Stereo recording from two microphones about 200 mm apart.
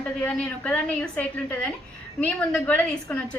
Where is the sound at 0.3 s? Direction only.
5° left (ahead or behind).